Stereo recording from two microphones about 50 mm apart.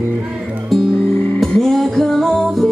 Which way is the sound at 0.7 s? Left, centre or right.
Centre.